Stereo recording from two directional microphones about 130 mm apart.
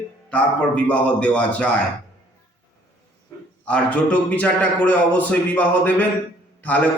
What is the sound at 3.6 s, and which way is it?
A man's voice, 10° left (ahead or behind).